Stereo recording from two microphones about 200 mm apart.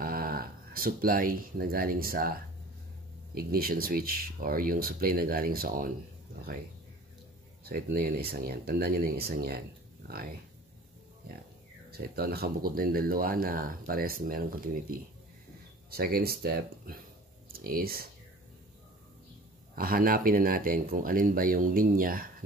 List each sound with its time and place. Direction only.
0.0 s speech: 45° right (ahead or behind)
7.6 s speech: 50° right (ahead or behind)
11.9 s speech: 50° right (ahead or behind)
19.7 s speech: 45° right (ahead or behind)